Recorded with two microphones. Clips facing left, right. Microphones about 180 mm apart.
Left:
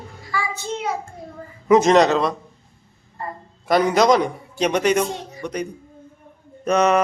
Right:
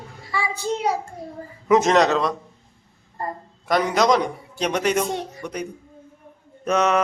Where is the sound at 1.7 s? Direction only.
Centre (ahead or behind).